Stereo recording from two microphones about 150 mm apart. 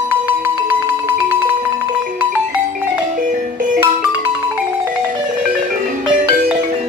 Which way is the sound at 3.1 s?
60° right (ahead or behind).